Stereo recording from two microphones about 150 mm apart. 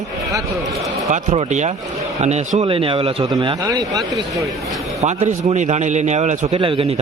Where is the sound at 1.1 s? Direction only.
45° right (ahead or behind); by 4.4 s 25° right (ahead or behind).